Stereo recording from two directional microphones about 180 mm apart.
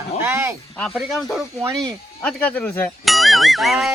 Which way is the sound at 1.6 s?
20° right (ahead or behind).